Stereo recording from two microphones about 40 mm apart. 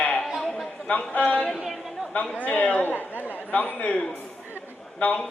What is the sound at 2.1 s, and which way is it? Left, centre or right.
Speech, left.